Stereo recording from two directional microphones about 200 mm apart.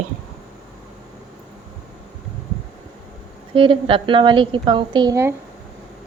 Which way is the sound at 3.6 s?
25° right (ahead or behind).